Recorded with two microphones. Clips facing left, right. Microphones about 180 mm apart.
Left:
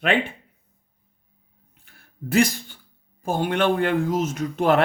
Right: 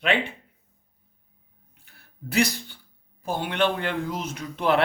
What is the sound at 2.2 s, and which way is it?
Speech, 50° left (ahead or behind).